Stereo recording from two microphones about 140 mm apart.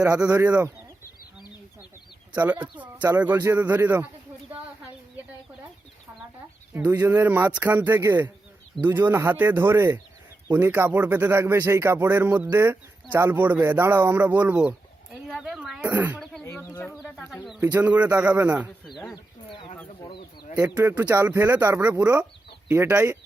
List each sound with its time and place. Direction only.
0.2 s speech: 10° right (ahead or behind)
2.3 s speech: 10° right (ahead or behind)
7.1 s speech: 10° right (ahead or behind)
16.6 s speech: 15° left (ahead or behind)
17.0 s chicken: 5° left (ahead or behind)
17.6 s speech: 10° right (ahead or behind)
19.5 s a sound: 40° left (ahead or behind)
20.6 s speech: 10° right (ahead or behind)